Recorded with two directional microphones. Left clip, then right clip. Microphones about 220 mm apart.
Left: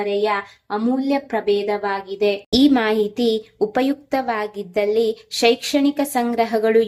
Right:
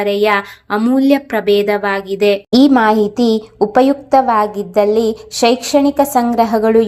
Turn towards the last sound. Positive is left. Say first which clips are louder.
# right 5 dB
turn(degrees=-20)  # may be behind; listen again after turning